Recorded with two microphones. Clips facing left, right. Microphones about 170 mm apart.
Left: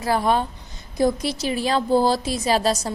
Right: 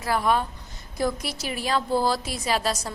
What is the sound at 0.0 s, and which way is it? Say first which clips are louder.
A woman's voice: left 3 dB; 30° left (ahead or behind).